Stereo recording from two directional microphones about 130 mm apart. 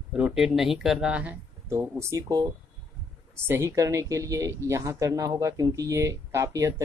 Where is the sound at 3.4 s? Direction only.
20° right (ahead or behind).